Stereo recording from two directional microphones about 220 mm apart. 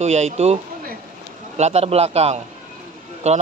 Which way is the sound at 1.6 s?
30° right (ahead or behind).